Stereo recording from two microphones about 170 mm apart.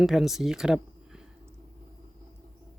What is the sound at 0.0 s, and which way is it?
Speech, centre (ahead or behind).